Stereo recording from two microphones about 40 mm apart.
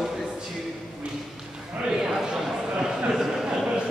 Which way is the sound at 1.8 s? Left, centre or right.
Centre.